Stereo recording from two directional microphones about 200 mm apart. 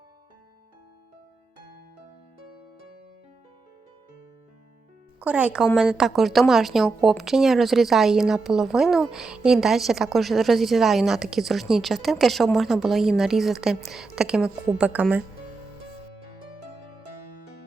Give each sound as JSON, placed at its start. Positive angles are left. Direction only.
{"t": 5.2, "sound": "speech", "side_deg": -5}